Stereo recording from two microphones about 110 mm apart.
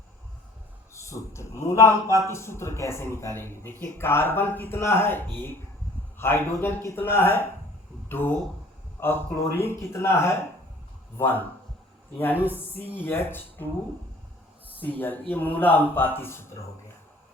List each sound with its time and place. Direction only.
0.9 s a man's voice: 25° left (ahead or behind)
9.6 s a man's voice: 20° left (ahead or behind)
12.4 s speech: 15° right (ahead or behind)
12.7 s a man's voice: 20° left (ahead or behind)
14.9 s a man's voice: 15° left (ahead or behind)